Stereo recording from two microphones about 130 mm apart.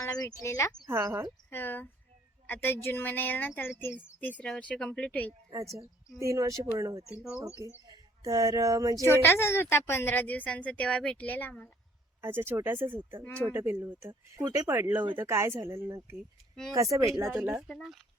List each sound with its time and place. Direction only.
0.0 s speech: 30° left (ahead or behind)
0.9 s speech: 20° right (ahead or behind)
1.5 s a woman's voice: 15° left (ahead or behind)
6.1 s speech: 25° right (ahead or behind)
7.2 s speech: 10° right (ahead or behind)
7.9 s speech: 30° right (ahead or behind)
9.0 s a woman's voice: 20° left (ahead or behind)
12.2 s speech: 15° right (ahead or behind)
14.4 s speech: 30° right (ahead or behind)
17.7 s speech: centre (ahead or behind)